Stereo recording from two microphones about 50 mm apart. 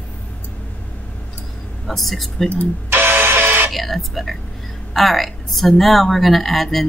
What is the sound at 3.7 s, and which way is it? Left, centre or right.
A woman's voice, centre.